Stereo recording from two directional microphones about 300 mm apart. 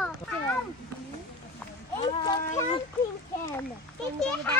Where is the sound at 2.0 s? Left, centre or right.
Centre.